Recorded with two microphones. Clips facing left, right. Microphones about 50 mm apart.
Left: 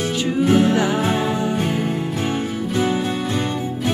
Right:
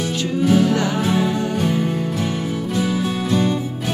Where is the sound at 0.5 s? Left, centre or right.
Left.